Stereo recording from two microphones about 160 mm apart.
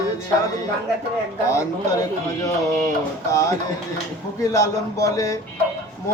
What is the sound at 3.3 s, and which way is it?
A man's voice, 20° left (ahead or behind).